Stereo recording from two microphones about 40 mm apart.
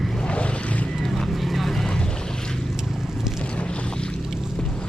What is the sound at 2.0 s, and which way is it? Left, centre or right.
Boat, centre.